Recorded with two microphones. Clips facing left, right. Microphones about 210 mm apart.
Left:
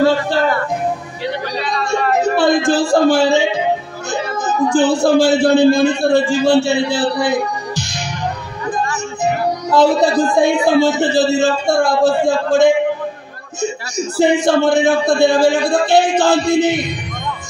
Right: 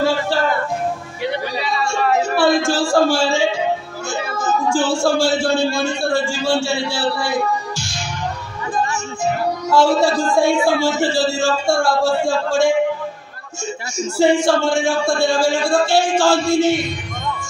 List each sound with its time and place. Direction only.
0.0 s music: 20° left (ahead or behind)
1.6 s a sound: centre (ahead or behind)
2.2 s speech: 20° left (ahead or behind)
9.2 s speech: 20° left (ahead or behind)
14.2 s speech: 20° left (ahead or behind)